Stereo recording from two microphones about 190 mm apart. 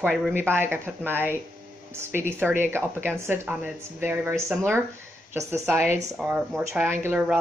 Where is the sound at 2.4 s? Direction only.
10° right (ahead or behind).